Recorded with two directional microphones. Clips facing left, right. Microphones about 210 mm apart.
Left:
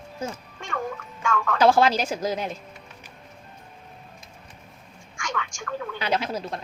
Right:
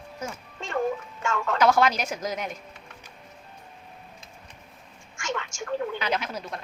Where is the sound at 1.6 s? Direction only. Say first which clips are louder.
Left 3 dB; 30° left (ahead or behind).